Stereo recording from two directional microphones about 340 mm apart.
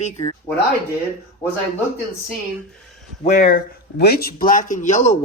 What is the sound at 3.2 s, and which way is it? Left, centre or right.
Speech, left.